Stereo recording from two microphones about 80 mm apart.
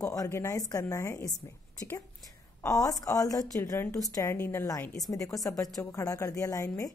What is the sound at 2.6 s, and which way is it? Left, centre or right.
A woman's voice, left.